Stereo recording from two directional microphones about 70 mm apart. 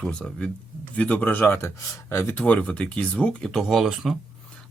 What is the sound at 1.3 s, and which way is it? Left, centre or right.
Speech, left.